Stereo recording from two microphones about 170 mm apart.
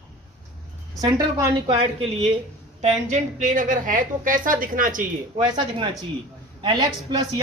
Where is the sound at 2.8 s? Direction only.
45° right (ahead or behind).